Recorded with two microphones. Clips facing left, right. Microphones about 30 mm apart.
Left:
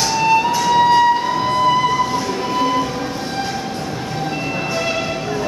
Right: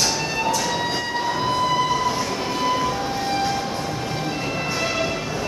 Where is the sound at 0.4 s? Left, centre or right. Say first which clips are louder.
Left 8 dB; centre.